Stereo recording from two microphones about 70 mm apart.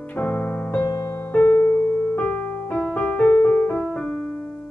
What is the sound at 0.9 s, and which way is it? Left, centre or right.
Music, left.